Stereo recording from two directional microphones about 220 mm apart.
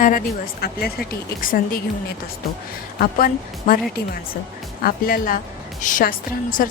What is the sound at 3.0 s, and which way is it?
Speech, 40° left (ahead or behind).